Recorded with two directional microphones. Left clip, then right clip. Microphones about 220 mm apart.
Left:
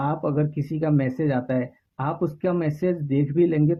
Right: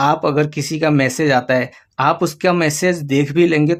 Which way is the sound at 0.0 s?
20° right (ahead or behind).